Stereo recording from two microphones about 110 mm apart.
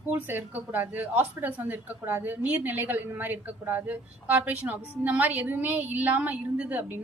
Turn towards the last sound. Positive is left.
turn(degrees=-15)  # may be behind; listen again after turning